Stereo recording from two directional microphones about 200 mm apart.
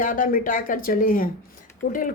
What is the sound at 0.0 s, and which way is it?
A woman's voice, 40° left (ahead or behind).